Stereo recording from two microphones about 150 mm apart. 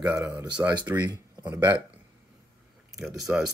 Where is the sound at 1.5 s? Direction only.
15° right (ahead or behind).